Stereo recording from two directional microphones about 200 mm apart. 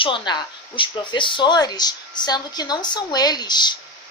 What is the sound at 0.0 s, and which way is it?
A woman's voice, 25° left (ahead or behind).